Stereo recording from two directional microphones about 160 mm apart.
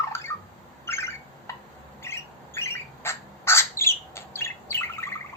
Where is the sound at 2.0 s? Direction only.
15° left (ahead or behind).